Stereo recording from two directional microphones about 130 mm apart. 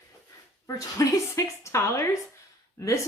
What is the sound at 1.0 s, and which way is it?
Speech, 25° left (ahead or behind).